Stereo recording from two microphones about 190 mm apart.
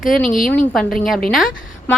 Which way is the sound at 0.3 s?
45° left (ahead or behind).